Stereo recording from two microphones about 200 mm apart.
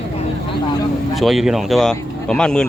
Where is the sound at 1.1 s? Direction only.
Centre (ahead or behind).